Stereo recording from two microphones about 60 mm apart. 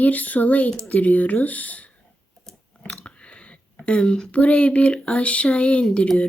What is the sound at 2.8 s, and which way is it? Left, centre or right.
Chewing, centre.